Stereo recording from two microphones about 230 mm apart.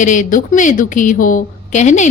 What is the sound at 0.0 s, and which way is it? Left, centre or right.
A woman's voice, left.